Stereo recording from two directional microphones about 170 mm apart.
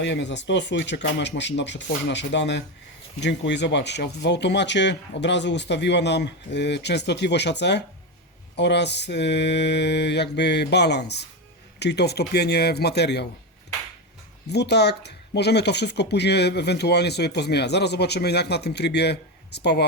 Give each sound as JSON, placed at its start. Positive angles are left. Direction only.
{"t": 0.0, "sound": "speech", "side_deg": 90}
{"t": 14.5, "sound": "speech", "side_deg": 80}